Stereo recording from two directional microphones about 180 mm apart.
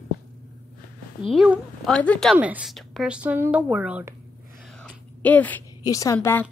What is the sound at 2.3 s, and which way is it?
Speech, 10° right (ahead or behind).